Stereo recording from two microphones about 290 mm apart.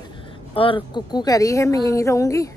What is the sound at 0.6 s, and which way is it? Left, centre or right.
A woman's voice, centre.